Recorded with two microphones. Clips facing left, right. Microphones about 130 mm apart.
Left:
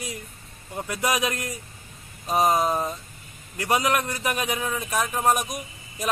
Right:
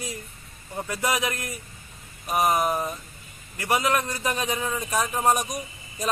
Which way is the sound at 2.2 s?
25° left (ahead or behind).